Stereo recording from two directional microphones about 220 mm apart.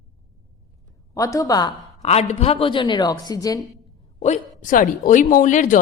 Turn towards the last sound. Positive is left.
turn(degrees=35)  # may be behind; listen again after turning